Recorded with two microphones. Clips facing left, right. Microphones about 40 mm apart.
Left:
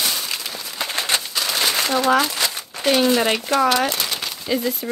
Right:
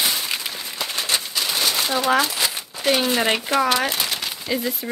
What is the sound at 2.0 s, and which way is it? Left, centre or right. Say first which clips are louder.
Speech: even; centre.